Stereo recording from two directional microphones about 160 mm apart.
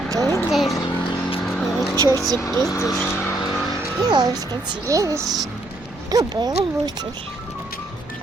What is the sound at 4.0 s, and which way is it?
Speech, 25° right (ahead or behind).